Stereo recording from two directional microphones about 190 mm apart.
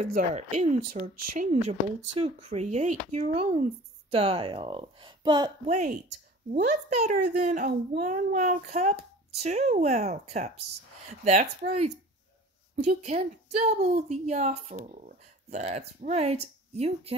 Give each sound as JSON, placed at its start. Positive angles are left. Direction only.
{"t": 0.2, "sound": "a woman's voice", "side_deg": -35}
{"t": 2.1, "sound": "a woman's voice", "side_deg": -30}
{"t": 5.7, "sound": "a woman's voice", "side_deg": -40}